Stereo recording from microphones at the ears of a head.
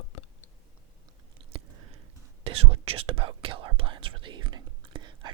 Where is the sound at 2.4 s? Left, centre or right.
Right.